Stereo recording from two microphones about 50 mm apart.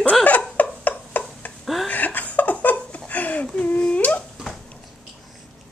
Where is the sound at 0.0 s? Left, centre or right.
Left.